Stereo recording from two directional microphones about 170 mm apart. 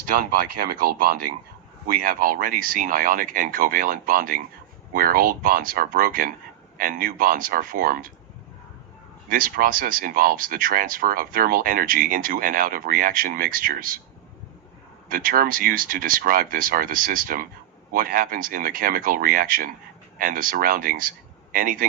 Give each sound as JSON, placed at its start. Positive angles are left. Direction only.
{"t": 0.1, "sound": "speech", "side_deg": -60}
{"t": 9.3, "sound": "speech", "side_deg": -55}
{"t": 15.1, "sound": "speech", "side_deg": -55}